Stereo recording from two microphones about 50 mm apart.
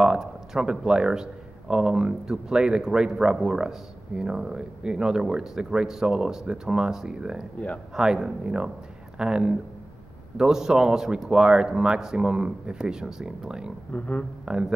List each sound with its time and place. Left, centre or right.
0.0 s speech: centre
13.9 s speech: left
14.4 s speech: centre